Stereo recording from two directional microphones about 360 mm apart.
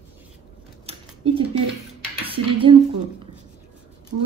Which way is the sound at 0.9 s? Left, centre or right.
Centre.